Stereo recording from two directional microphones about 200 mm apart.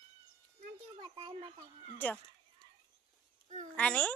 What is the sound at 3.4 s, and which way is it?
Speech, 35° right (ahead or behind).